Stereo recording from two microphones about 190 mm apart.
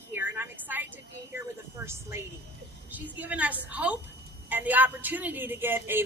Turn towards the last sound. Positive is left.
turn(degrees=-10)  # may be behind; listen again after turning